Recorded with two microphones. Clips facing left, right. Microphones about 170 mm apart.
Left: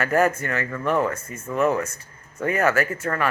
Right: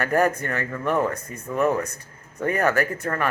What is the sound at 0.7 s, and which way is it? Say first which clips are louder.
Speech: even; 15° right (ahead or behind).